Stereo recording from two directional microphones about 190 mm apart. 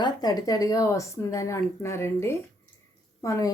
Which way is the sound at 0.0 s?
20° left (ahead or behind).